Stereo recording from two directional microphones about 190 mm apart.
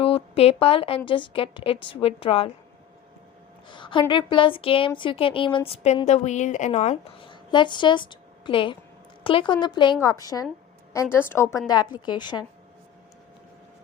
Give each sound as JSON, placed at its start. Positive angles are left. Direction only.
{"t": 0.0, "sound": "a woman's voice", "side_deg": 30}
{"t": 3.7, "sound": "a woman's voice", "side_deg": 25}
{"t": 7.3, "sound": "a woman's voice", "side_deg": 25}